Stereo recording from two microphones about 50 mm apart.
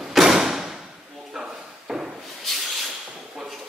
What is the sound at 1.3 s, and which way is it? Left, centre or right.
Drawer open or close, centre.